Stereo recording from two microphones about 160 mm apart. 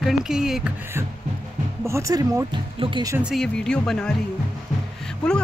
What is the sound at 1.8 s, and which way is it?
Speech, 20° right (ahead or behind).